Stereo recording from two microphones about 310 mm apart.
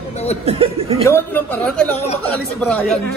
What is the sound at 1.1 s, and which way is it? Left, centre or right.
A woman's voice, centre.